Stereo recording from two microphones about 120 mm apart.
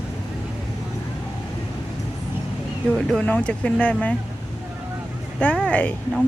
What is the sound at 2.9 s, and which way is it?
Speech, 5° left (ahead or behind).